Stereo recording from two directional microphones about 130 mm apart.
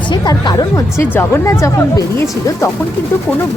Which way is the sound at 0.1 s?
35° left (ahead or behind).